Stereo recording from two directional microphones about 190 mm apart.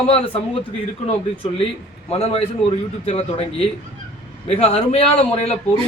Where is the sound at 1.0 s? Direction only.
30° left (ahead or behind).